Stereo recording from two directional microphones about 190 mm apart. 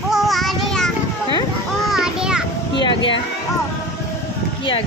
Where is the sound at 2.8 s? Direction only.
25° left (ahead or behind).